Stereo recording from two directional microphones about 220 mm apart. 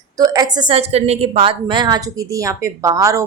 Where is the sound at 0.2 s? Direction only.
15° right (ahead or behind).